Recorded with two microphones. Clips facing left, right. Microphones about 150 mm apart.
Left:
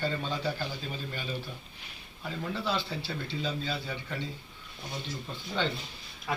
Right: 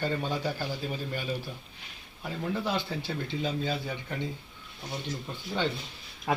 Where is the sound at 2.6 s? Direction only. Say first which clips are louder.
Right 1 dB; 15° right (ahead or behind).